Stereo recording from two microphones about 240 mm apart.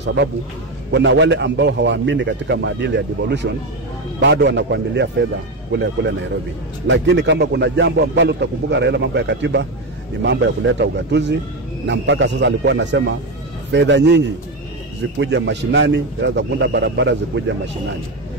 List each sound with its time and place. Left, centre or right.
0.0 s speech: right